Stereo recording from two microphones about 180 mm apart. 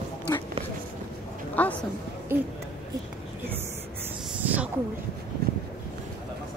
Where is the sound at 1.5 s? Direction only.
10° left (ahead or behind).